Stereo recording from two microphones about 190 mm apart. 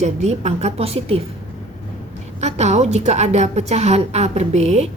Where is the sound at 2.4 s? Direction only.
35° right (ahead or behind).